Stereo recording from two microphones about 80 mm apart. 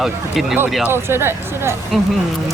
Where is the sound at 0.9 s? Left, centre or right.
Right.